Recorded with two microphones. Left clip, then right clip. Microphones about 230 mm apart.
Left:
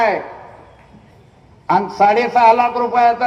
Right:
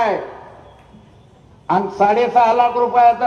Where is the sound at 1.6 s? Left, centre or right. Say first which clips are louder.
Left 2 dB; left.